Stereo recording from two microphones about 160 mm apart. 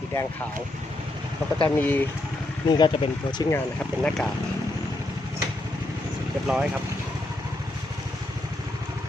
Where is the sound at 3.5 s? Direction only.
5° left (ahead or behind).